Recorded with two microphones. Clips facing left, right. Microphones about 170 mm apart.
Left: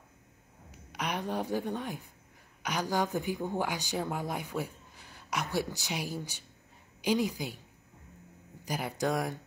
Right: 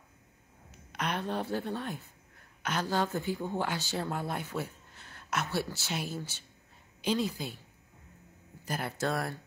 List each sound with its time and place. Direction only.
0.7 s a woman's voice: 10° left (ahead or behind)
8.6 s speech: 15° left (ahead or behind)